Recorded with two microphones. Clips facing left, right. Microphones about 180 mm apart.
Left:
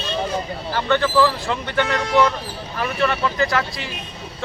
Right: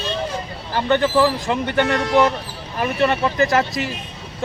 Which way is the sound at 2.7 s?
20° right (ahead or behind).